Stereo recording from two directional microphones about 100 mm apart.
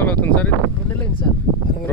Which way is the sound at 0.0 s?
20° left (ahead or behind).